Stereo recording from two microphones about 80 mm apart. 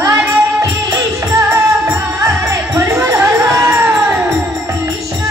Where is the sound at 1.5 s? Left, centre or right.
Right.